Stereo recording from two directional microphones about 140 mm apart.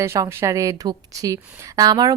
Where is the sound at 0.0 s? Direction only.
20° right (ahead or behind).